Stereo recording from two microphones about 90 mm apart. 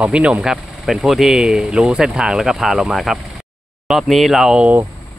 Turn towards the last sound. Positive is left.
turn(degrees=-5)  # may be behind; listen again after turning